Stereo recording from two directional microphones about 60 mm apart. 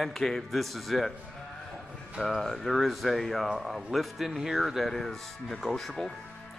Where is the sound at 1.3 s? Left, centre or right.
Centre.